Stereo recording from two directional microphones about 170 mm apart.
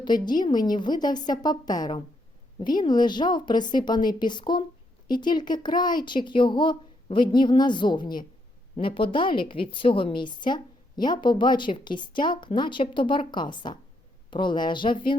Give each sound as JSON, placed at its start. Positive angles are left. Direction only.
{"t": 0.0, "sound": "a woman's voice", "side_deg": 25}